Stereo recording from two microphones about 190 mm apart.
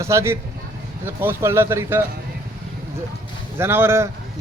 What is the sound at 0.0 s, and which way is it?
A man's voice, 15° right (ahead or behind).